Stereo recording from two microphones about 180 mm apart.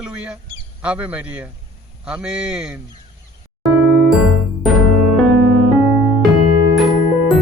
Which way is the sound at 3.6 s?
Centre (ahead or behind).